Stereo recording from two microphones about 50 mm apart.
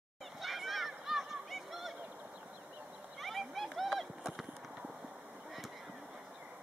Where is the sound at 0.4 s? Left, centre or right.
Centre.